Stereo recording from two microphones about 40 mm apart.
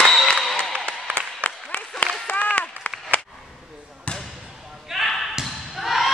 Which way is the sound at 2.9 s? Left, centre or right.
Left.